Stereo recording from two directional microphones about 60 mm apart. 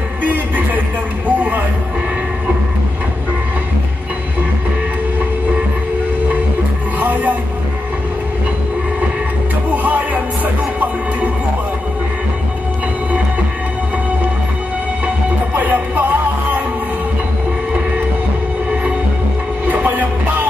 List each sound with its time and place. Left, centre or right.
0.2 s music: right
7.0 s music: right
9.7 s music: right
15.5 s music: right
19.6 s music: right